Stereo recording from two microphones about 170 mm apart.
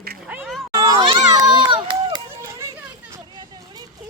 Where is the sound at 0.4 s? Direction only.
Centre (ahead or behind).